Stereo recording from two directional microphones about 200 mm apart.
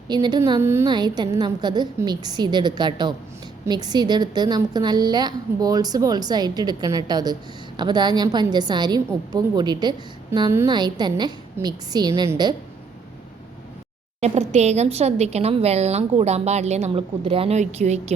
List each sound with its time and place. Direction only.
0.1 s a woman's voice: 20° right (ahead or behind)
14.2 s speech: 35° right (ahead or behind)